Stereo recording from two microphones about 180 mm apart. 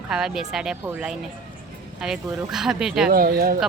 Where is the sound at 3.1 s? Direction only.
55° right (ahead or behind).